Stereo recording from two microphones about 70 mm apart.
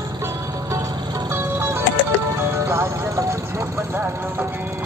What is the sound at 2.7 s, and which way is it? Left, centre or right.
Music, right.